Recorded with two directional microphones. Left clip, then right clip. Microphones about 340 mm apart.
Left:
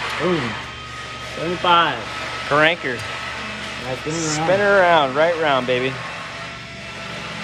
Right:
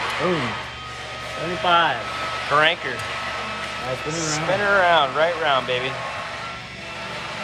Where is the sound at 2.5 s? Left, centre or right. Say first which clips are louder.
Left 2 dB; centre.